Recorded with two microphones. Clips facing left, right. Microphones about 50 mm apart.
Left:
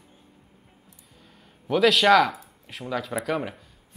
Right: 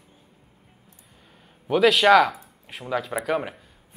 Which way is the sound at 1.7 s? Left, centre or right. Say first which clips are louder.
Right 2 dB; centre.